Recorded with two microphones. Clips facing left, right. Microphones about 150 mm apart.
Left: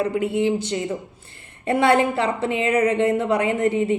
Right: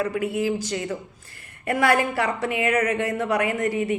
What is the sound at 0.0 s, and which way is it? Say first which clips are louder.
A woman's voice: left 3 dB; 25° left (ahead or behind).